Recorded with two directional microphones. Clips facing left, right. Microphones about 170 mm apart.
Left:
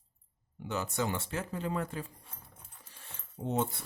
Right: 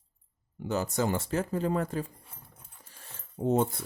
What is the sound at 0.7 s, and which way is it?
Speech, 40° right (ahead or behind).